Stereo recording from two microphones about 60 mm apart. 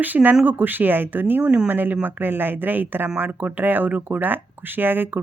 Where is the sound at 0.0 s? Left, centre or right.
Right.